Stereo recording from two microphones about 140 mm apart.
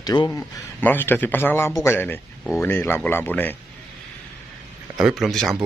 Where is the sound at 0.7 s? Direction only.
15° left (ahead or behind).